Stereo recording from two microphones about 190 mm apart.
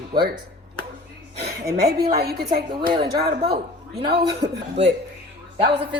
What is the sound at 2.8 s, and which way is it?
Speech, 25° right (ahead or behind).